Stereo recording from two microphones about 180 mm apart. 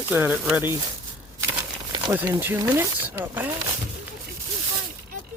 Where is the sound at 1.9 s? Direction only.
15° right (ahead or behind).